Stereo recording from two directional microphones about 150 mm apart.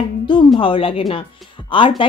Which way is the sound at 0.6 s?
35° left (ahead or behind).